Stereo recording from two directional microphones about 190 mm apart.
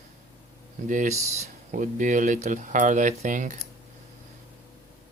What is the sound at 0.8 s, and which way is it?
Speech, 40° right (ahead or behind).